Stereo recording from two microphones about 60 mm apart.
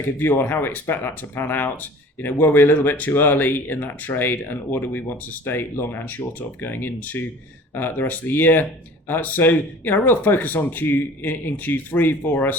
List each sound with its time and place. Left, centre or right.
0.2 s speech: left